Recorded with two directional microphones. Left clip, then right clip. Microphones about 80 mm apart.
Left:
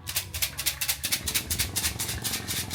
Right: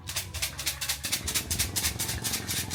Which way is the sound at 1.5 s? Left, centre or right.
Centre.